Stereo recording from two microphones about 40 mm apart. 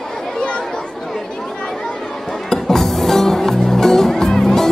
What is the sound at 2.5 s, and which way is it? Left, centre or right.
Music, centre.